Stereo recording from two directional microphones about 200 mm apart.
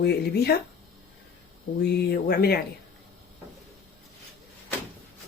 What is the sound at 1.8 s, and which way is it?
Speech, 55° left (ahead or behind).